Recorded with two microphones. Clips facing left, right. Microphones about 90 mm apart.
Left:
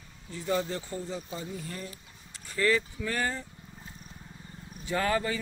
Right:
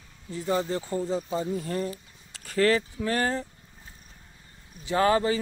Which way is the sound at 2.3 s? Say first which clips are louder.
Right 4 dB; 90° right.